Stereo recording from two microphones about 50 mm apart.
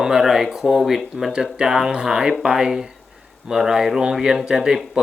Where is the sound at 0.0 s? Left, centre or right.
Centre.